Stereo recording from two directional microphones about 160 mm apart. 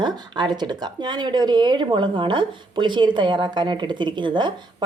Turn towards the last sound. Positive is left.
turn(degrees=-30)  # may be behind; listen again after turning